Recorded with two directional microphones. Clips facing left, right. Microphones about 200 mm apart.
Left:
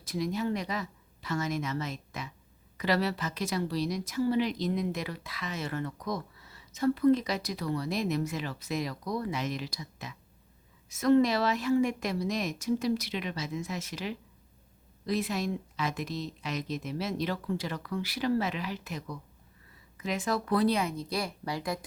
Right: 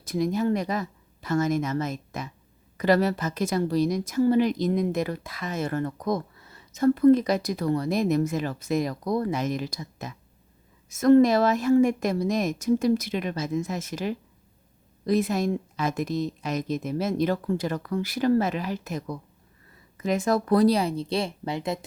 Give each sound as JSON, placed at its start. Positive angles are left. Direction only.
{"t": 0.0, "sound": "a woman's voice", "side_deg": -50}